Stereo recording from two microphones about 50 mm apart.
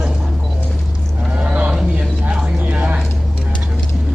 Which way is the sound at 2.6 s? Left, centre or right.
Right.